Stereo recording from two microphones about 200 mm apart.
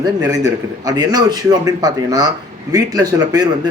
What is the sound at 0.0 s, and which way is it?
A man's voice, 15° right (ahead or behind).